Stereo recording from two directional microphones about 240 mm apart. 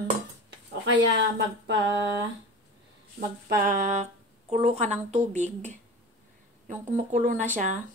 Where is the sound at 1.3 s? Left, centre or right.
Right.